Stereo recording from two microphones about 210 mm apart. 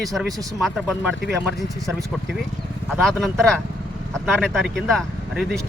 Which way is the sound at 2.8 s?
Centre (ahead or behind).